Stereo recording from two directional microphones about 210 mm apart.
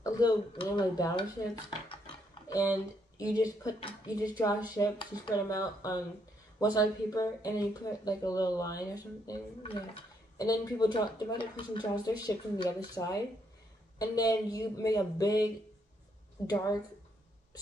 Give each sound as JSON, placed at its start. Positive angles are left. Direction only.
{"t": 0.0, "sound": "speech", "side_deg": 20}
{"t": 2.4, "sound": "a sound", "side_deg": 15}
{"t": 3.2, "sound": "speech", "side_deg": 15}
{"t": 16.4, "sound": "speech", "side_deg": 15}